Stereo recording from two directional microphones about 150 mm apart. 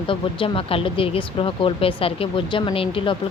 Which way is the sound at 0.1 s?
35° left (ahead or behind).